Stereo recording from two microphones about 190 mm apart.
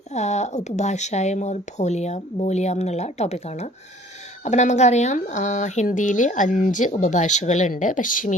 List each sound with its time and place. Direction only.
0.1 s speech: 35° left (ahead or behind)